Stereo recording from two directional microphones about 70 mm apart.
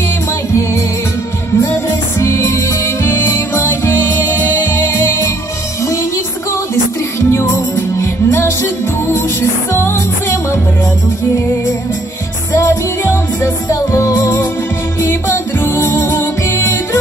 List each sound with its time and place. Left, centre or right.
1.7 s music: left
6.7 s music: left
12.5 s music: left